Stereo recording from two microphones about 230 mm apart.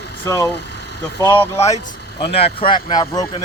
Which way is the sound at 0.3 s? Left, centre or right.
Centre.